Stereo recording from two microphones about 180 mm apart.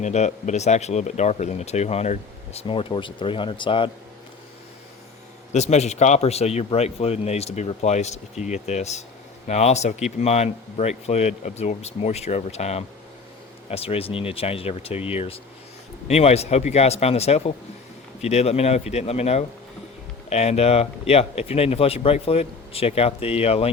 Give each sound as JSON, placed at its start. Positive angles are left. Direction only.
{"t": 0.0, "sound": "speech", "side_deg": 40}
{"t": 5.5, "sound": "speech", "side_deg": 40}